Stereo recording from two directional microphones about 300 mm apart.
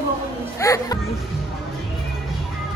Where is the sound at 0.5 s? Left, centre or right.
Centre.